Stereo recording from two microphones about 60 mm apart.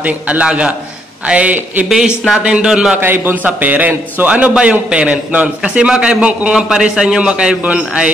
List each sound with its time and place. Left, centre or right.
0.0 s a man's voice: right
1.9 s a man's voice: centre
3.0 s a man's voice: right
3.4 s a man's voice: right